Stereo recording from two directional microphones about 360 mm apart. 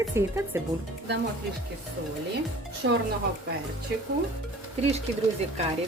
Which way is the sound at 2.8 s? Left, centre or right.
Right.